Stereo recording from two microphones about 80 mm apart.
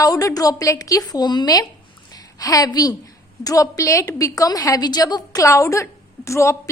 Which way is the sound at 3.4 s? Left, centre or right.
Left.